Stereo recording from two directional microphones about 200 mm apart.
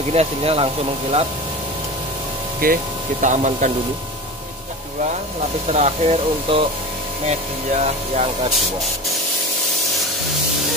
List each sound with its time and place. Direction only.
0.1 s speech: 30° right (ahead or behind)
2.6 s speech: 40° right (ahead or behind)
5.7 s speech: 35° right (ahead or behind)